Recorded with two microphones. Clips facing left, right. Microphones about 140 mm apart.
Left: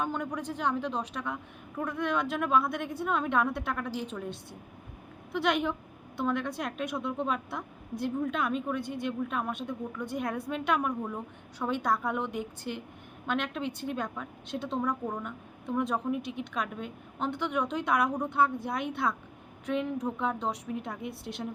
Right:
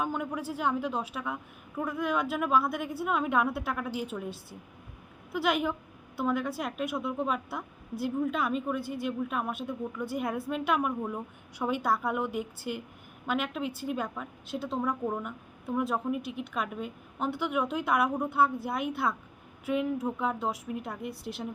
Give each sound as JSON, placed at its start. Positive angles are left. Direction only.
{"t": 0.0, "sound": "a woman's voice", "side_deg": -5}